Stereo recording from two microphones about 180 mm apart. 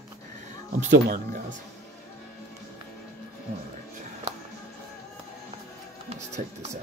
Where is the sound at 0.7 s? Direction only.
45° right (ahead or behind).